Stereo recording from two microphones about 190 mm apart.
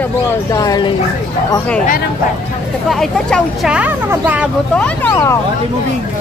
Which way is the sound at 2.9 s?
Centre (ahead or behind).